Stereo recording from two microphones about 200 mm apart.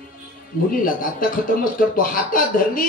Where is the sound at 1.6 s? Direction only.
45° left (ahead or behind).